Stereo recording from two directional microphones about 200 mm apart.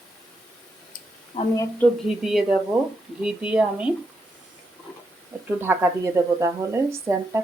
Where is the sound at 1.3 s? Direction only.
35° left (ahead or behind).